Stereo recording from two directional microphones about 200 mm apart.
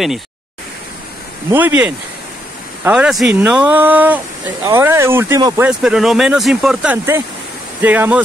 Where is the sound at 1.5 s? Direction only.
10° right (ahead or behind).